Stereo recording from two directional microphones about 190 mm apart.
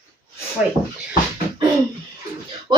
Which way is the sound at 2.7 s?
25° right (ahead or behind).